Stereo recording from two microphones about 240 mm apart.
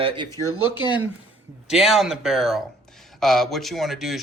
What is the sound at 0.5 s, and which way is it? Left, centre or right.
Speech, right.